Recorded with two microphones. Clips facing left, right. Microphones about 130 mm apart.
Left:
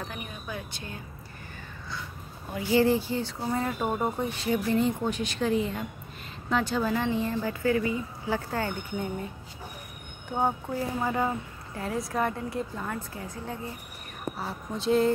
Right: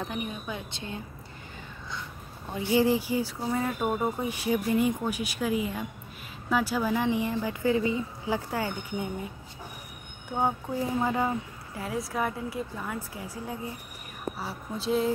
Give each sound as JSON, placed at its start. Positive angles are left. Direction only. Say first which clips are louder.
{"t": 0.1, "sound": "speech", "louder": "right 4 dB", "side_deg": -20}
{"t": 2.5, "sound": "a woman's voice", "louder": "left 1 dB", "side_deg": -20}
{"t": 4.2, "sound": "a woman's voice", "louder": "even", "side_deg": -10}
{"t": 10.3, "sound": "a woman's voice", "louder": "even", "side_deg": -5}